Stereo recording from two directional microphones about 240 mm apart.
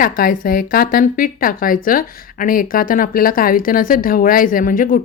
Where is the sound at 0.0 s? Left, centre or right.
Left.